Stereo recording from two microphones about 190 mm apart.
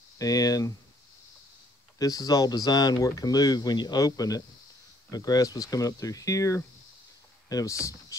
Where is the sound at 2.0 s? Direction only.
20° left (ahead or behind).